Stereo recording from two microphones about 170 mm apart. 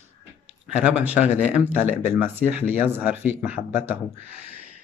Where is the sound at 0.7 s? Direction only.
10° right (ahead or behind).